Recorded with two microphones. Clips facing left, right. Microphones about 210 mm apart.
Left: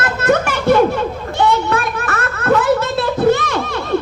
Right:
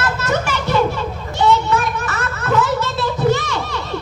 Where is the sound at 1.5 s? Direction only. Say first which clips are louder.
Even; 55° left (ahead or behind).